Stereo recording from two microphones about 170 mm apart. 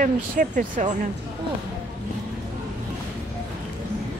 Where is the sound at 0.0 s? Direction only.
50° right (ahead or behind).